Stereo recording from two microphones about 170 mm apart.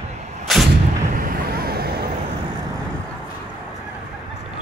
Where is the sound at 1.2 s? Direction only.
60° right (ahead or behind).